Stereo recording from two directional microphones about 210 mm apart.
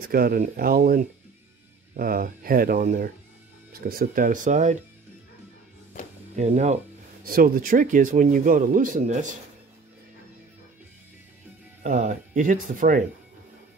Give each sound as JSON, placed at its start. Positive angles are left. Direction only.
{"t": 0.1, "sound": "speech", "side_deg": -45}
{"t": 6.3, "sound": "speech", "side_deg": -30}
{"t": 11.8, "sound": "speech", "side_deg": -35}